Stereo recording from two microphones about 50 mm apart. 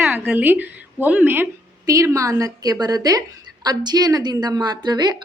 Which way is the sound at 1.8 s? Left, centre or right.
Right.